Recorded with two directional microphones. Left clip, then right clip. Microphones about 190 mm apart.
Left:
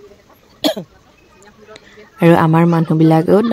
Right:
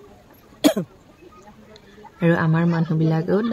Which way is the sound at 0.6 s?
60° right (ahead or behind).